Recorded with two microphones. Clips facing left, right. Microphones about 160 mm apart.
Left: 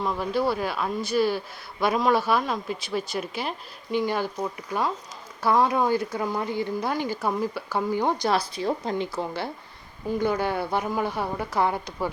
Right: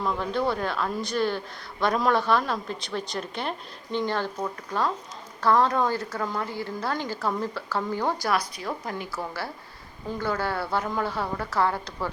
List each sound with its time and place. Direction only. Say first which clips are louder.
0.0 s speech: left 1 dB; 5° left (ahead or behind)
5.4 s speech: even; 10° left (ahead or behind)